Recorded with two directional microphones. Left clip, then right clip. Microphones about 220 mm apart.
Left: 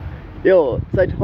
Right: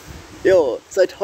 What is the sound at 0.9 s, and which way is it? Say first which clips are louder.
Speech: right 2 dB; 35° right (ahead or behind).